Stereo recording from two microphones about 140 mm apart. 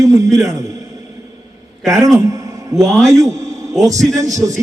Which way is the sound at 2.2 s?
25° right (ahead or behind).